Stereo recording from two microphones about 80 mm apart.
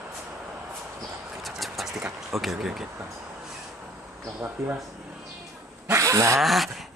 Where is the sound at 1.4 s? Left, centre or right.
Centre.